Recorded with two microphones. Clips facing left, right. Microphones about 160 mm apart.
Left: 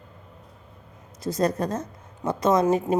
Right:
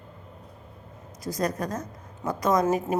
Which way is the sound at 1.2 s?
25° left (ahead or behind).